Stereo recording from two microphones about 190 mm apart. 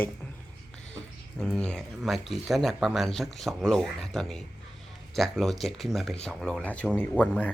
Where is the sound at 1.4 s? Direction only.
5° left (ahead or behind).